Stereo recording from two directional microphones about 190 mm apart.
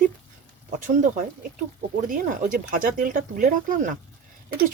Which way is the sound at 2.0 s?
45° right (ahead or behind).